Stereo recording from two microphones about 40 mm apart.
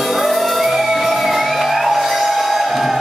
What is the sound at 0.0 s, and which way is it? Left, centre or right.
Music, centre.